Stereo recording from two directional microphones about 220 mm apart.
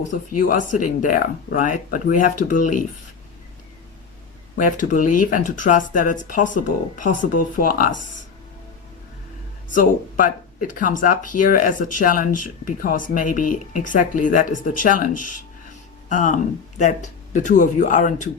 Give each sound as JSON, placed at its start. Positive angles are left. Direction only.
{"t": 0.1, "sound": "speech", "side_deg": 35}
{"t": 4.5, "sound": "speech", "side_deg": 35}
{"t": 9.7, "sound": "speech", "side_deg": 35}
{"t": 15.1, "sound": "speech", "side_deg": 90}
{"t": 16.0, "sound": "speech", "side_deg": 35}